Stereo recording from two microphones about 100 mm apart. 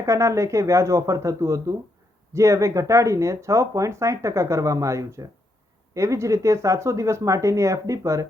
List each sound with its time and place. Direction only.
0.0 s speech: 30° right (ahead or behind)